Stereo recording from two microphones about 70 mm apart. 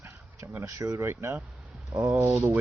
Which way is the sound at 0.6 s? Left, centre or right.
Right.